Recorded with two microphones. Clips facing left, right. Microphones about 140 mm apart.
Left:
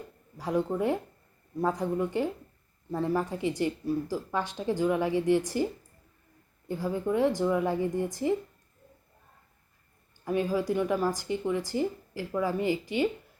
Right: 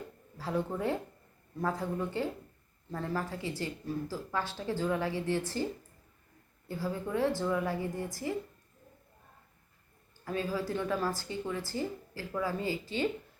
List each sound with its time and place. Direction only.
0.3 s speech: 15° left (ahead or behind)
6.7 s a woman's voice: 20° left (ahead or behind)
10.2 s speech: 15° left (ahead or behind)